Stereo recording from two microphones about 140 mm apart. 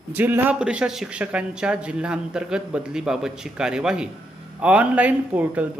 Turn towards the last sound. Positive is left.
turn(degrees=-10)  # may be behind; listen again after turning